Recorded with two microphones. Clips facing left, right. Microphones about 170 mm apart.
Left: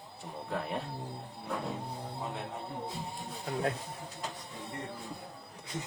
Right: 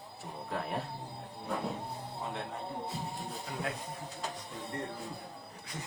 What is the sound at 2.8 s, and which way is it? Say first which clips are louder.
Speech: right 1 dB; centre (ahead or behind).